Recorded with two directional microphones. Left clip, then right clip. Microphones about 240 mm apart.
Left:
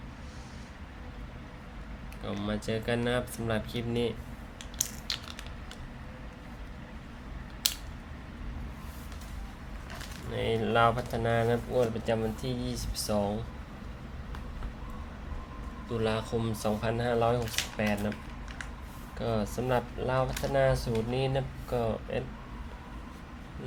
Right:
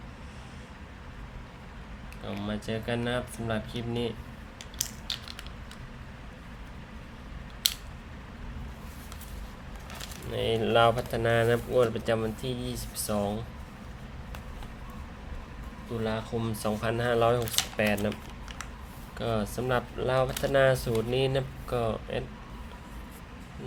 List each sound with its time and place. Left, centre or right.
2.2 s speech: centre
10.3 s speech: centre
16.0 s speech: centre
16.5 s speech: centre
19.2 s speech: centre